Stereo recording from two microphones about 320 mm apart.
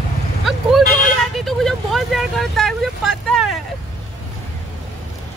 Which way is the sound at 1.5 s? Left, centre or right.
Centre.